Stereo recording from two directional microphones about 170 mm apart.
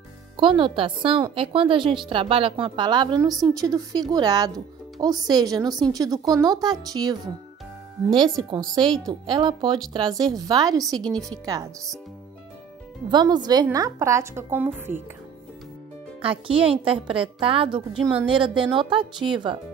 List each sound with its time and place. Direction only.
0.4 s a woman's voice: 30° right (ahead or behind)
8.8 s a woman's voice: 5° left (ahead or behind)
9.2 s a woman's voice: 25° right (ahead or behind)
13.1 s a woman's voice: 25° right (ahead or behind)
16.2 s a woman's voice: 30° right (ahead or behind)